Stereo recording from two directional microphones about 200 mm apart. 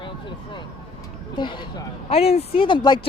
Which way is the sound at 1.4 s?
25° left (ahead or behind).